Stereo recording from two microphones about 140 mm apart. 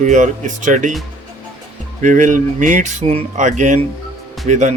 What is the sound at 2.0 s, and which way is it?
A man's voice, 65° right (ahead or behind).